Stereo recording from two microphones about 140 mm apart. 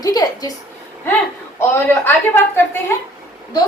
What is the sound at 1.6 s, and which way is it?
A man's voice, 15° left (ahead or behind).